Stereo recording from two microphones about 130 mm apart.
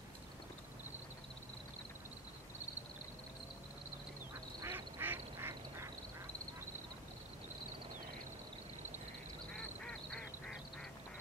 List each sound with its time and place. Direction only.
4.6 s quack: 20° right (ahead or behind)
9.5 s duck: 5° left (ahead or behind)